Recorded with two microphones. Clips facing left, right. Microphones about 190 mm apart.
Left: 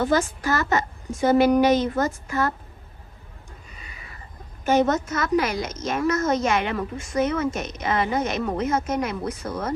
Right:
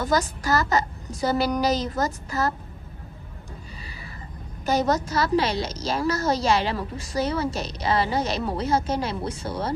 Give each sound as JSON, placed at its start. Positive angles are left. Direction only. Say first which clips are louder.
{"t": 0.0, "sound": "a woman's voice", "louder": "left 2 dB", "side_deg": -40}
{"t": 4.6, "sound": "a woman's voice", "louder": "left 3 dB", "side_deg": -35}